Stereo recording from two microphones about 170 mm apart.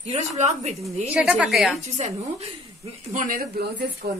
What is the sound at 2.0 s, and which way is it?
Speech, 40° right (ahead or behind).